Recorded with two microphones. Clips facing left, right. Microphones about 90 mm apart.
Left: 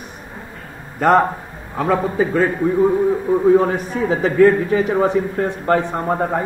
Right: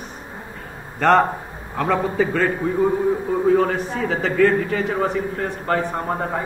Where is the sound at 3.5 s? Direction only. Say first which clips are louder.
Left 3 dB; 20° left (ahead or behind).